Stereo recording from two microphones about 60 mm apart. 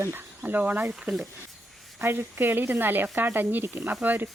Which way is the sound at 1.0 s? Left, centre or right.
Centre.